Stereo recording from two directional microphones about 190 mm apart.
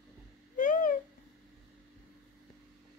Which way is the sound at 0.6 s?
45° left (ahead or behind).